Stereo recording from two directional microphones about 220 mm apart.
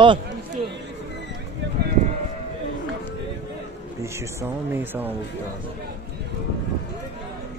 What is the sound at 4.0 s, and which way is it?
Speech, 10° right (ahead or behind).